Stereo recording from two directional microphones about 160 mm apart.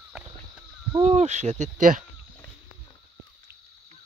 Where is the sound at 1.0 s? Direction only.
45° right (ahead or behind).